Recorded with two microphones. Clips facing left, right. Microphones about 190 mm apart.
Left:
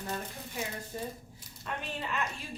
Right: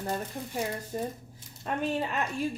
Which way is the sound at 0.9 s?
45° right (ahead or behind).